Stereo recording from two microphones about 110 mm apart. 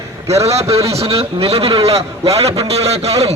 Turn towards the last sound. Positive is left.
turn(degrees=-70)  # may be behind; listen again after turning